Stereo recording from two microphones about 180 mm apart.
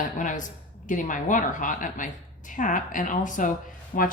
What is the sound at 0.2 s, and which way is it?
Speech, 45° left (ahead or behind).